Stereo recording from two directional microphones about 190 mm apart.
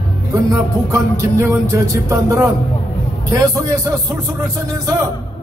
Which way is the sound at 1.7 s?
15° right (ahead or behind).